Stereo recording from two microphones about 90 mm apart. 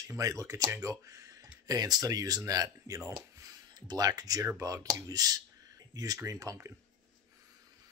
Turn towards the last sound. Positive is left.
turn(degrees=-35)  # may be behind; listen again after turning